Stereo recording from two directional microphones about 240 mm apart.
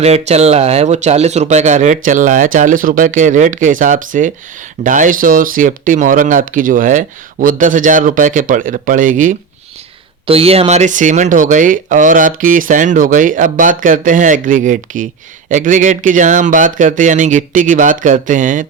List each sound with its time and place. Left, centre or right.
0.0 s speech: right